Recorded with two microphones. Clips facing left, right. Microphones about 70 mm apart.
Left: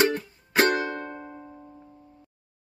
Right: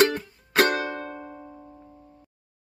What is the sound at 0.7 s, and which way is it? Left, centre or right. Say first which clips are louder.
Music: left 1 dB; centre.